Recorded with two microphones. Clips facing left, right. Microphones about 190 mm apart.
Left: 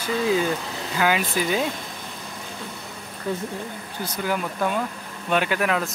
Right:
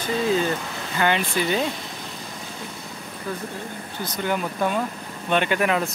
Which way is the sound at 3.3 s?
25° left (ahead or behind).